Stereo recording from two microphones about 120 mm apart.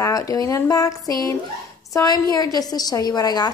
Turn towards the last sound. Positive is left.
turn(degrees=35)  # may be behind; listen again after turning